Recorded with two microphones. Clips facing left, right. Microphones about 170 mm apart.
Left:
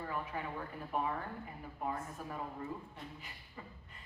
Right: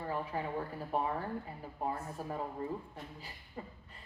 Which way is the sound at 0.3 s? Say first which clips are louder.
Right 4 dB; 35° right (ahead or behind).